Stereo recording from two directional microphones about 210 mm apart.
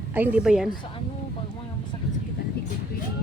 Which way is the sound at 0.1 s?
5° right (ahead or behind).